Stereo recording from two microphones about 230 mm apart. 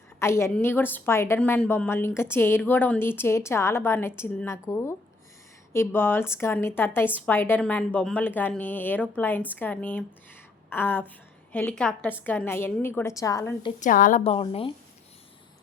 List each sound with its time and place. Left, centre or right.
0.2 s a woman's voice: centre
13.7 s a woman's voice: left